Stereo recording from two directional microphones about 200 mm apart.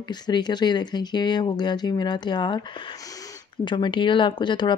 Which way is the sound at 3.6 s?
25° left (ahead or behind).